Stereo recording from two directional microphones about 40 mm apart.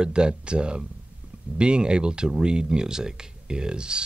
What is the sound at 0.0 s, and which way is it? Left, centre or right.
Speech, right.